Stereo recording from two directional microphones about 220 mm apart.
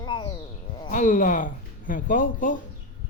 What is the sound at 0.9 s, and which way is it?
Speech, 35° left (ahead or behind).